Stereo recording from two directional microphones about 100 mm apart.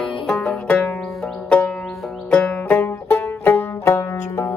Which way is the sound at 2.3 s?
10° left (ahead or behind).